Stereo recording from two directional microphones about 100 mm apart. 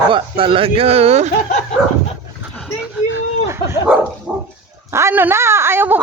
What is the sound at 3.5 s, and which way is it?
Dog, 25° right (ahead or behind).